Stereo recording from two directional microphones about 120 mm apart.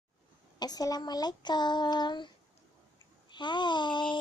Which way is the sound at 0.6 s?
30° left (ahead or behind).